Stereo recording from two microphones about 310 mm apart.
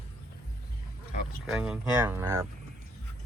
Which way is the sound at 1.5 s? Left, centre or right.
Centre.